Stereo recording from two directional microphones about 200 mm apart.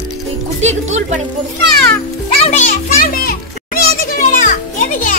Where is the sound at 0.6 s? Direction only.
35° right (ahead or behind).